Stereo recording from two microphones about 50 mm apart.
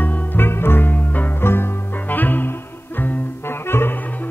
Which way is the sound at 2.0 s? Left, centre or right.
Left.